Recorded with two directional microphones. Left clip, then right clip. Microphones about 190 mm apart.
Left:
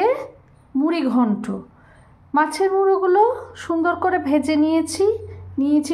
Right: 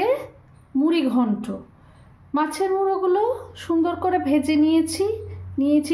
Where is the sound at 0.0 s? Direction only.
10° left (ahead or behind).